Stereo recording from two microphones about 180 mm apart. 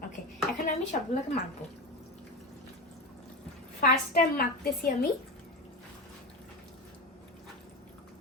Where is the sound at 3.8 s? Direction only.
55° left (ahead or behind).